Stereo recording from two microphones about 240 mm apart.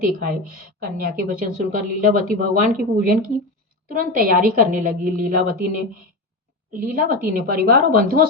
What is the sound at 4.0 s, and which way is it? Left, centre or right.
A woman's voice, right.